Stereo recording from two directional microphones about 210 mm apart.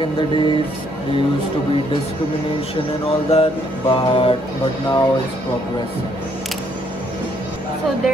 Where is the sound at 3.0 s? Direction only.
30° left (ahead or behind).